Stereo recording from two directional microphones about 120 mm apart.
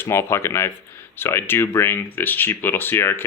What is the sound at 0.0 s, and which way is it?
Speech, 20° left (ahead or behind).